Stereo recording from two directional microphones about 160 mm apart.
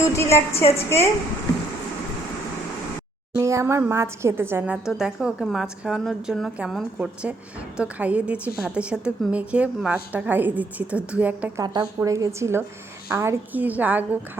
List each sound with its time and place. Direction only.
0.0 s a woman's voice: 15° left (ahead or behind)
3.3 s a woman's voice: 20° right (ahead or behind)
11.6 s a woman's voice: 25° right (ahead or behind); by 14.2 s 10° right (ahead or behind)